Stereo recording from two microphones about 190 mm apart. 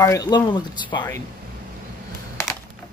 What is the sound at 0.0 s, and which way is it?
Speech, 20° left (ahead or behind).